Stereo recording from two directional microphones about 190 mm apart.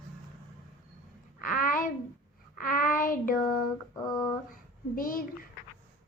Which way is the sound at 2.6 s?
45° left (ahead or behind).